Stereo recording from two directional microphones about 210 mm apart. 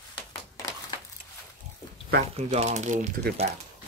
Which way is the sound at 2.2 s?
30° right (ahead or behind).